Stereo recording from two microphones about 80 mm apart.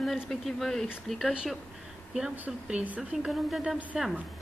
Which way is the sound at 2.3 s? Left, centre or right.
Right.